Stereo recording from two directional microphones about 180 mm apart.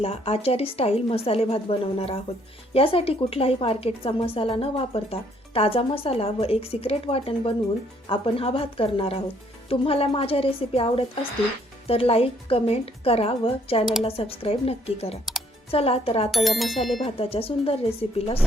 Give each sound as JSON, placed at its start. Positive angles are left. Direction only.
{"t": 0.0, "sound": "a woman's voice", "side_deg": 35}
{"t": 16.3, "sound": "speech", "side_deg": 0}
{"t": 17.0, "sound": "a woman's voice", "side_deg": 30}